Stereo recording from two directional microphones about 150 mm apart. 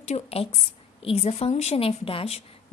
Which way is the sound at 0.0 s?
45° left (ahead or behind).